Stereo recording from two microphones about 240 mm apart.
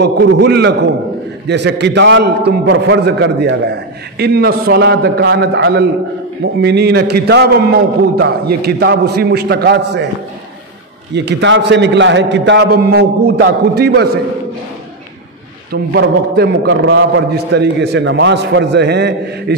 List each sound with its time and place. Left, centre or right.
0.0 s a man's voice: right
11.1 s a man's voice: right
15.7 s a man's voice: right